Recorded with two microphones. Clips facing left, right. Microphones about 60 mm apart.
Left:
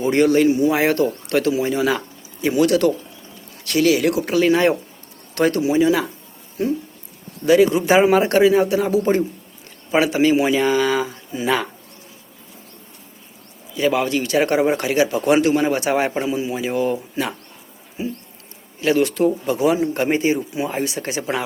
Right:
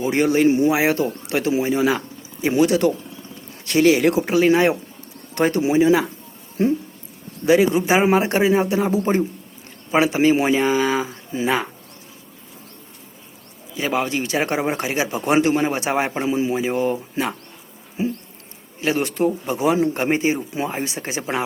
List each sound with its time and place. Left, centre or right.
0.0 s speech: centre
0.7 s speech: centre
7.4 s speech: right
13.7 s speech: right
18.0 s a sound: right
18.8 s speech: right